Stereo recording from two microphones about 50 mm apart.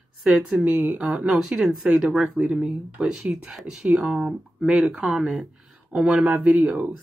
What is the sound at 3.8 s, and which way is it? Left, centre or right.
Speech, centre.